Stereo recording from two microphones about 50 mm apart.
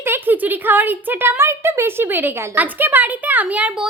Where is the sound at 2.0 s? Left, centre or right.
Right.